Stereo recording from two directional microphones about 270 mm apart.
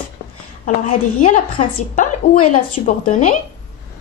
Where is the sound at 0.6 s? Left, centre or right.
Left.